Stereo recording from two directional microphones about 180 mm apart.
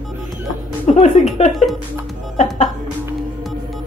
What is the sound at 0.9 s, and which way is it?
Speech, 35° left (ahead or behind).